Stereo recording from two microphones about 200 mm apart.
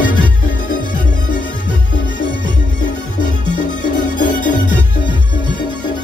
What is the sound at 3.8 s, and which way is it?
Music, 40° left (ahead or behind).